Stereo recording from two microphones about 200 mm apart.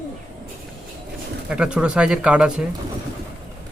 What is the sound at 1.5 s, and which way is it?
Speech, 5° right (ahead or behind).